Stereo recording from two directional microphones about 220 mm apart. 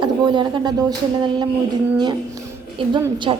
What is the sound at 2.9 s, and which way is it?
Speech, 20° right (ahead or behind).